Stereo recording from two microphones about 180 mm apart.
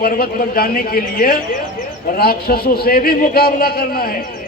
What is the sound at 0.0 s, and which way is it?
A man's voice, 55° left (ahead or behind).